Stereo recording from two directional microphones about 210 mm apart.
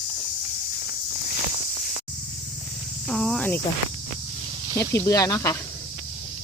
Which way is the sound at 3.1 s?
Centre (ahead or behind).